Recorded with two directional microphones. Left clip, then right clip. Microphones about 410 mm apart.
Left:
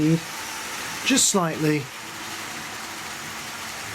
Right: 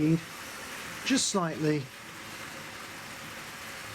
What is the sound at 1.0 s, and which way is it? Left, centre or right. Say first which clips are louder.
Speech: left 7 dB; centre.